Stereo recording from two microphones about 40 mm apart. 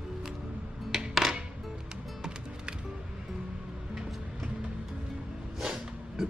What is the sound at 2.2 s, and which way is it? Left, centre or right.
Music, right.